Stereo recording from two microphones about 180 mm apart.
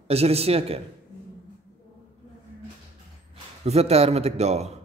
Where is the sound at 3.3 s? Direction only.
35° right (ahead or behind).